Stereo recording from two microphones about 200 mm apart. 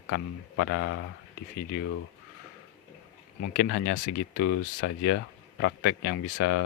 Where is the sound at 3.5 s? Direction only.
55° left (ahead or behind).